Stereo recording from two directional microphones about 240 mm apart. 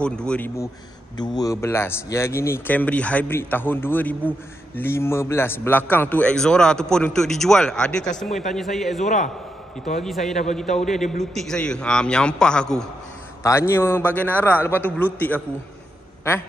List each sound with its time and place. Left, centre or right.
0.0 s a man's voice: centre
1.1 s a man's voice: centre
9.0 s a man's voice: left
9.9 s a man's voice: centre